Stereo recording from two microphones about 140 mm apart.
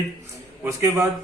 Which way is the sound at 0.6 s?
20° right (ahead or behind).